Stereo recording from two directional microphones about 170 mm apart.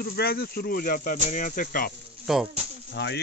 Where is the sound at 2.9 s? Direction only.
90° left.